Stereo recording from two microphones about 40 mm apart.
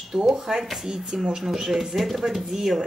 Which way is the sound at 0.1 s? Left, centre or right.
Centre.